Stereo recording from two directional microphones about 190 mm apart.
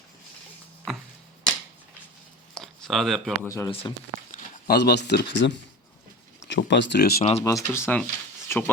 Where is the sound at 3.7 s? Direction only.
30° left (ahead or behind).